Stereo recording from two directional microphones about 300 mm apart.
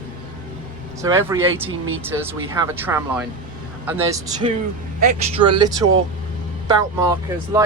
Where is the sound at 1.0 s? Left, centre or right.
Centre.